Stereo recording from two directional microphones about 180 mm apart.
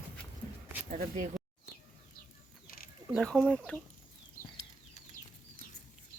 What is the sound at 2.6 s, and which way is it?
Mechanisms, 55° left (ahead or behind).